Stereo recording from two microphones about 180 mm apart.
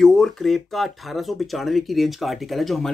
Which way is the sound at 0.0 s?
5° left (ahead or behind).